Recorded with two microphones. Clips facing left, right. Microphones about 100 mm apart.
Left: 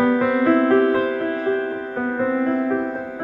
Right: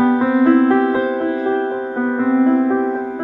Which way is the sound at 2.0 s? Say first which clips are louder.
Right 6 dB; 25° right (ahead or behind).